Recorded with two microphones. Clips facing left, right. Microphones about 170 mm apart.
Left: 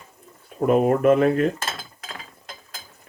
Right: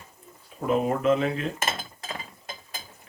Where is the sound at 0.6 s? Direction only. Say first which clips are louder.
Left 6 dB; 55° left (ahead or behind).